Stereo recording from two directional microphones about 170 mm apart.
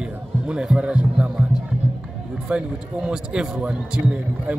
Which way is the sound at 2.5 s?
5° right (ahead or behind).